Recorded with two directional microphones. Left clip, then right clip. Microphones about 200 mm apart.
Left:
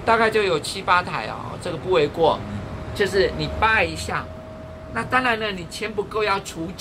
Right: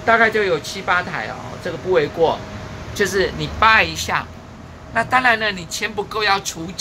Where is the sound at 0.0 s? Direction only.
25° right (ahead or behind).